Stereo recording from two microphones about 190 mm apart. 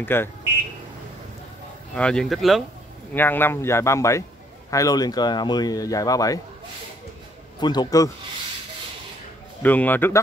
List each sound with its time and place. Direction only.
0.0 s speech: 10° left (ahead or behind)
2.0 s speech: 5° left (ahead or behind)
3.2 s speech: 10° left (ahead or behind)
7.6 s speech: 20° left (ahead or behind)
9.6 s speech: 10° left (ahead or behind)